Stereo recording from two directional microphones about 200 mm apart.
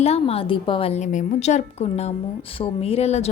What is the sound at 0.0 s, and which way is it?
A woman's voice, 30° left (ahead or behind).